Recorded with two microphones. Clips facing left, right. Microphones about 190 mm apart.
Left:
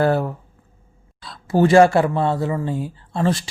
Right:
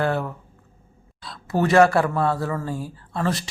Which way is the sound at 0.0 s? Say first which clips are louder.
Left 5 dB; 35° left (ahead or behind).